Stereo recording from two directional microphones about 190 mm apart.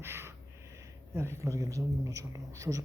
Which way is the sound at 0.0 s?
15° right (ahead or behind).